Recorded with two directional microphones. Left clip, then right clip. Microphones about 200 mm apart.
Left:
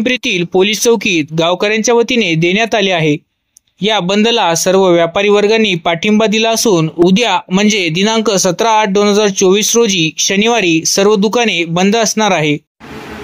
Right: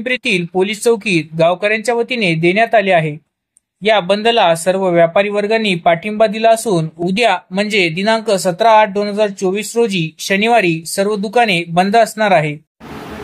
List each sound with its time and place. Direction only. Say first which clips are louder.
0.0 s speech: left 2 dB; 40° left (ahead or behind)